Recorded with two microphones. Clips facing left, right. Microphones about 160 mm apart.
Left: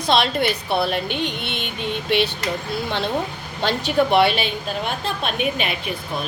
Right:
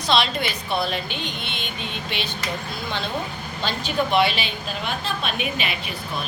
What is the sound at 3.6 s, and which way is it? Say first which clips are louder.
A woman's voice: left 5 dB; 70° left (ahead or behind).